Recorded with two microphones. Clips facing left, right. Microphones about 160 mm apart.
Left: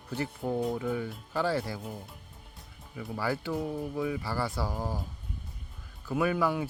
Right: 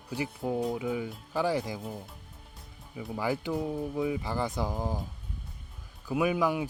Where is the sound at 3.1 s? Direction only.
15° right (ahead or behind).